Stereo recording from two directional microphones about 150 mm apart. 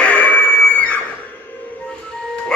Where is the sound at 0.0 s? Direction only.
10° left (ahead or behind).